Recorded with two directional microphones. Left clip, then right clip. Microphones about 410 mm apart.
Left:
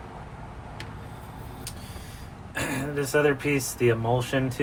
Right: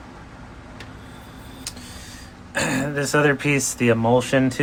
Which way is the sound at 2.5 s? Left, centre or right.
Right.